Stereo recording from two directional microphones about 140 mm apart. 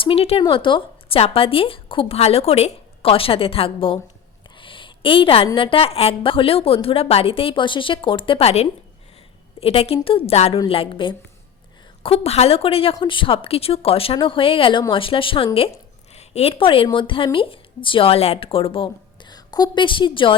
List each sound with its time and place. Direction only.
0.0 s a woman's voice: 40° left (ahead or behind)
4.5 s a sound: 35° left (ahead or behind)
5.5 s a woman's voice: 40° left (ahead or behind)